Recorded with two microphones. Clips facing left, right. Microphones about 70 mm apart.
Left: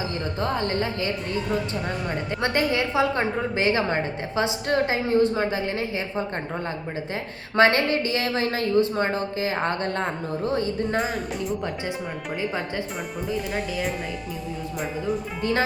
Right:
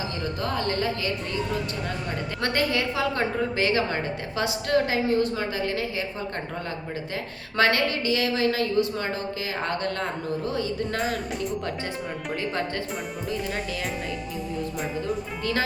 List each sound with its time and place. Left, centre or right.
0.4 s a woman's voice: left
2.4 s a woman's voice: left
7.5 s a woman's voice: left
10.9 s speech: centre
12.4 s speech: centre